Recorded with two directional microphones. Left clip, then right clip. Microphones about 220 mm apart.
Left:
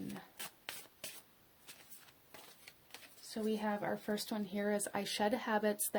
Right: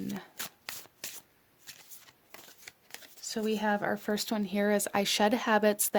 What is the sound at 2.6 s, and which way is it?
Speech, 40° right (ahead or behind).